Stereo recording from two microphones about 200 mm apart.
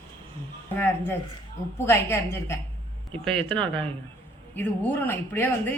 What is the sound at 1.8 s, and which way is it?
A man's voice, 10° left (ahead or behind).